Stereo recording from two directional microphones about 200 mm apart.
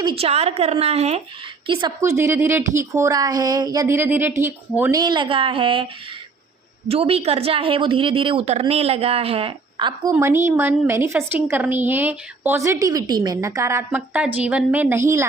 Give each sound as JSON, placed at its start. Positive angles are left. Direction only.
{"t": 0.0, "sound": "a woman's voice", "side_deg": -25}
{"t": 2.0, "sound": "speech", "side_deg": -15}
{"t": 4.9, "sound": "a woman's voice", "side_deg": -25}
{"t": 6.8, "sound": "a woman's voice", "side_deg": -30}